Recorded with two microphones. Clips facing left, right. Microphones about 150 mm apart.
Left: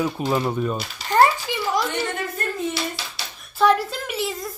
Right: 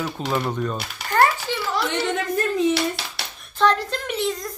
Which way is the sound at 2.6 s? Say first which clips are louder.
Right 6 dB; 65° right (ahead or behind).